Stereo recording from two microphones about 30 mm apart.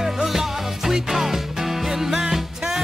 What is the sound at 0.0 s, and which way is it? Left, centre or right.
Music, centre.